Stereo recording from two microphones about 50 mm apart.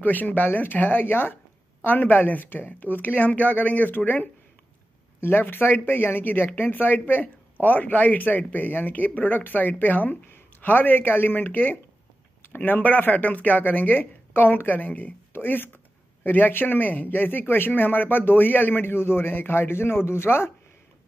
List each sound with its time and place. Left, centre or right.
0.0 s speech: left
15.3 s speech: left